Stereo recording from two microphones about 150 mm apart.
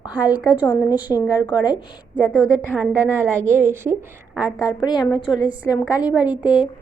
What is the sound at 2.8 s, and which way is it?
A woman's voice, 15° right (ahead or behind).